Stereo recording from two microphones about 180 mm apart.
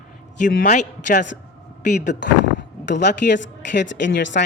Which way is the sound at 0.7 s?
45° left (ahead or behind).